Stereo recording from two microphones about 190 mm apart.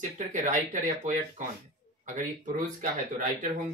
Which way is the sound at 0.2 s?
40° right (ahead or behind).